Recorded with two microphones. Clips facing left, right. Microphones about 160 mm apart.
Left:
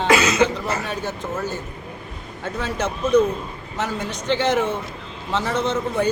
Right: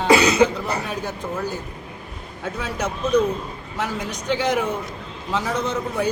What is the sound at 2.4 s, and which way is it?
A man's voice, 10° right (ahead or behind).